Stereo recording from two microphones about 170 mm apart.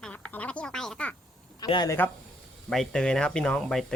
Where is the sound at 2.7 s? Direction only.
5° left (ahead or behind).